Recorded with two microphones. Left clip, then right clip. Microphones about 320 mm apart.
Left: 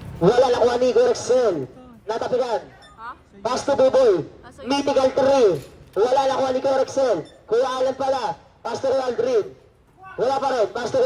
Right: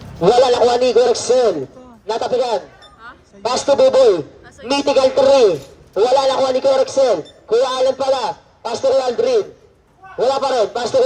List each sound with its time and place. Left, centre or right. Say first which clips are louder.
0.2 s a man's voice: right 5 dB; right